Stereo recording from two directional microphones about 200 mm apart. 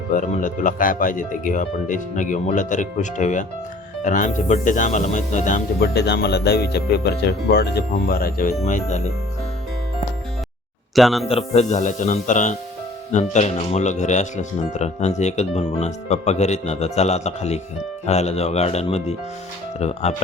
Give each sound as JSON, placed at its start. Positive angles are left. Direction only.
{"t": 0.1, "sound": "speech", "side_deg": 40}
{"t": 5.8, "sound": "speech", "side_deg": 55}
{"t": 8.6, "sound": "speech", "side_deg": 35}
{"t": 10.9, "sound": "speech", "side_deg": 0}
{"t": 11.3, "sound": "speech", "side_deg": 30}